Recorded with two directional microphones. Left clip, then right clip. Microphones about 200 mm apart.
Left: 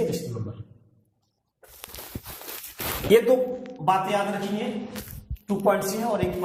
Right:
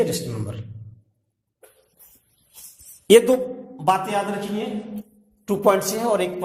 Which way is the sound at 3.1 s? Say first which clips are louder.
Right 5 dB; 45° right (ahead or behind).